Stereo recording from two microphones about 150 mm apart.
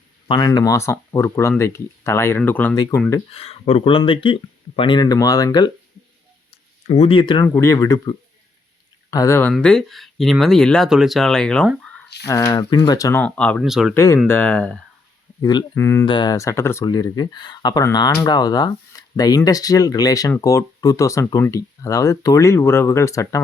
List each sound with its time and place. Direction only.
0.3 s speech: 30° left (ahead or behind); by 2.7 s 10° left (ahead or behind)
3.3 s speech: 45° left (ahead or behind); by 5.7 s 25° left (ahead or behind)
6.5 s a sound: 40° left (ahead or behind)
7.4 s speech: 15° left (ahead or behind)
9.5 s speech: 5° left (ahead or behind)
12.2 s speech: 25° left (ahead or behind)
13.2 s speech: 5° left (ahead or behind)
13.9 s speech: 20° left (ahead or behind)
15.4 s speech: 30° left (ahead or behind)
16.0 s speech: 30° left (ahead or behind)